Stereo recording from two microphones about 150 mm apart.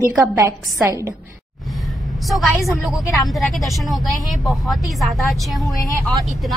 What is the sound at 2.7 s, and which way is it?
Speech, centre (ahead or behind).